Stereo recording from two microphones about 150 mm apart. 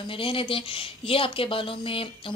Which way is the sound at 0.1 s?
35° left (ahead or behind).